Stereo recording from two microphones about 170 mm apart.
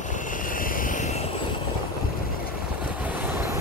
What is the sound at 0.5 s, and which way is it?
Vehicle, 55° left (ahead or behind).